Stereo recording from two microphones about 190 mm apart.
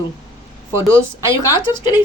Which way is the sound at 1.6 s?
25° left (ahead or behind).